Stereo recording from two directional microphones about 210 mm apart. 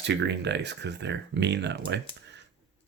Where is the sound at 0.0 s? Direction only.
55° right (ahead or behind).